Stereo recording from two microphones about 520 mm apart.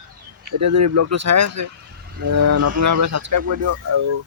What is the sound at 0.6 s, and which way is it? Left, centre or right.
Speech, right.